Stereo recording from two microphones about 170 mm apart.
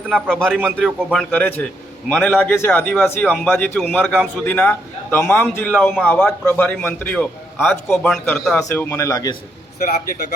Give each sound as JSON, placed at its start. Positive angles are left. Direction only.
{"t": 0.1, "sound": "a man's voice", "side_deg": 0}
{"t": 8.6, "sound": "a man's voice", "side_deg": 15}